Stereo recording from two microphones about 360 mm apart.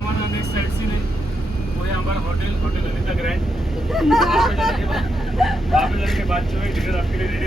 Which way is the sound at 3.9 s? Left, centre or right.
Centre.